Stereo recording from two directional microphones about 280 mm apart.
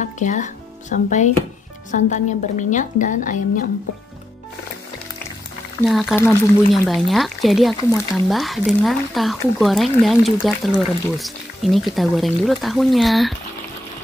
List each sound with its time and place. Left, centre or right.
0.0 s a woman's voice: left
5.9 s speech: centre